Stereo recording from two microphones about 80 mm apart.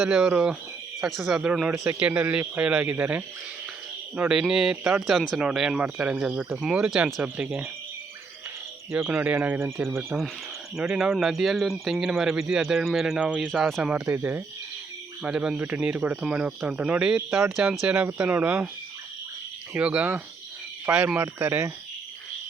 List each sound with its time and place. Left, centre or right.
0.0 s speech: centre
4.3 s speech: centre
6.7 s speech: centre
7.0 s speech: right
9.1 s speech: centre; by 10.0 s right
10.8 s speech: centre
13.4 s speech: centre
14.0 s speech: right
15.2 s speech: centre
19.7 s speech: right
20.9 s speech: centre
21.2 s speech: right